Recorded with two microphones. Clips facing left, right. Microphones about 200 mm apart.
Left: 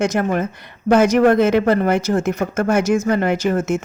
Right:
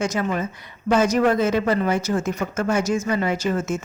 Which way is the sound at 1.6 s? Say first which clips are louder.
Left 5 dB; 55° left (ahead or behind).